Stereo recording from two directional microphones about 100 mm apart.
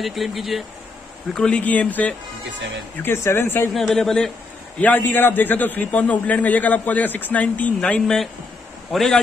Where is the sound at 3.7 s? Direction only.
Centre (ahead or behind).